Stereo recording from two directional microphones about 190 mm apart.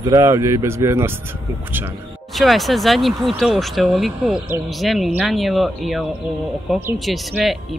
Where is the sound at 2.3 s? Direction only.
Centre (ahead or behind).